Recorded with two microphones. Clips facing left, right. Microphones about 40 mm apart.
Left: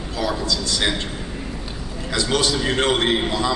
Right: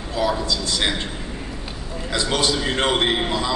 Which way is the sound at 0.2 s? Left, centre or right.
Centre.